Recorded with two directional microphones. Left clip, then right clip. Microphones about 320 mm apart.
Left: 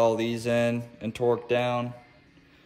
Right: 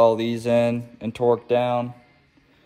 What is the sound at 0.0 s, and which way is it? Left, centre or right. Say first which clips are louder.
A man's voice: right 6 dB; centre.